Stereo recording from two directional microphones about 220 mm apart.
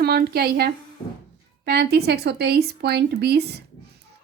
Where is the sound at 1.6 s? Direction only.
45° right (ahead or behind).